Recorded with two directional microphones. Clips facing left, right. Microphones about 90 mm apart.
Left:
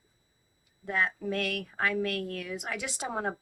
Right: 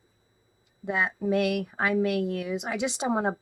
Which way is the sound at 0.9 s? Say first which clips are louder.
Right 4 dB; 15° right (ahead or behind).